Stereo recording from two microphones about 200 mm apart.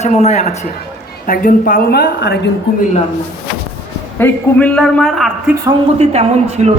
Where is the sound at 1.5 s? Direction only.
45° left (ahead or behind).